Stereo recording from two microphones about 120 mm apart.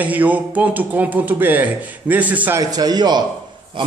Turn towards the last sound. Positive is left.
turn(degrees=-35)  # may be behind; listen again after turning